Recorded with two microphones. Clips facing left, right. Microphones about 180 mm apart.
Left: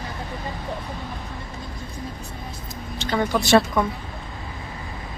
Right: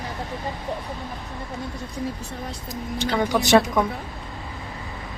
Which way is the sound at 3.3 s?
15° right (ahead or behind).